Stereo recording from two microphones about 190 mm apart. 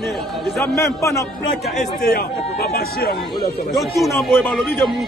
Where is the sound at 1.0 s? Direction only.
15° left (ahead or behind).